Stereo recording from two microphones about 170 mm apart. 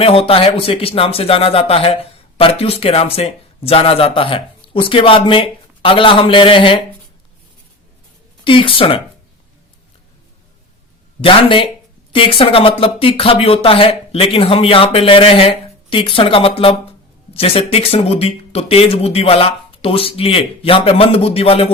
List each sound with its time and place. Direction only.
0.0 s speech: 35° left (ahead or behind)
8.4 s speech: 30° left (ahead or behind)
11.2 s speech: 30° left (ahead or behind)